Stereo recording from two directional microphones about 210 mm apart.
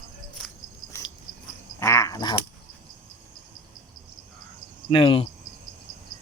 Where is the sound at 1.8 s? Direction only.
15° left (ahead or behind).